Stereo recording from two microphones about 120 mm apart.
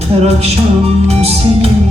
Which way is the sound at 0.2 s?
60° right (ahead or behind).